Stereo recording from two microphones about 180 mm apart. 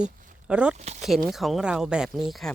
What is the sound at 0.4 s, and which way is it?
Speech, 5° right (ahead or behind).